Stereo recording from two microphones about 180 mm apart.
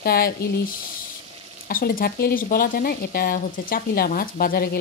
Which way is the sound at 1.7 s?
50° left (ahead or behind).